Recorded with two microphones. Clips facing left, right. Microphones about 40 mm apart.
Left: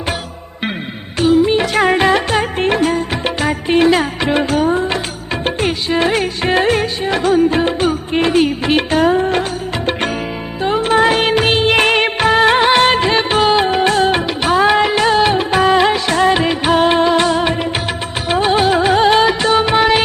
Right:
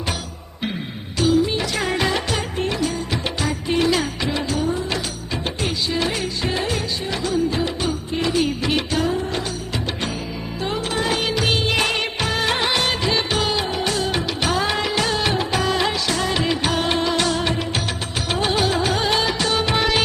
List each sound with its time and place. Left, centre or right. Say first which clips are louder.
1.2 s music: left 7 dB; left
5.5 s music of bollywood: left 8 dB; left
10.6 s music of bollywood: left 11 dB; left
18.3 s music: left 8 dB; left